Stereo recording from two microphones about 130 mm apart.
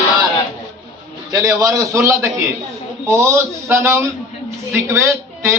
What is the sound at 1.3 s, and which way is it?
A man's voice, 25° right (ahead or behind).